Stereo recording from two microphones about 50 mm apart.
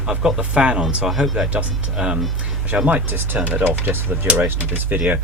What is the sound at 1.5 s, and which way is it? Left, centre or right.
Speech, centre.